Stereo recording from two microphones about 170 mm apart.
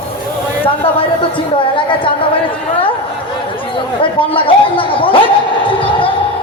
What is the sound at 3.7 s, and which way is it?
Speech, 30° left (ahead or behind).